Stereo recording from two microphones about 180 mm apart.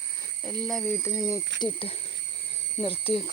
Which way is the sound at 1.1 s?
15° left (ahead or behind).